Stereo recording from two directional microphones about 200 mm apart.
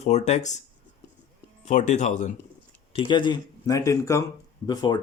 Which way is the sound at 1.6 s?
35° left (ahead or behind).